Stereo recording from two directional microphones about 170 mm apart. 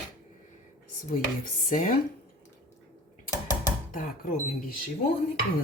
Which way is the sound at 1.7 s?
55° left (ahead or behind).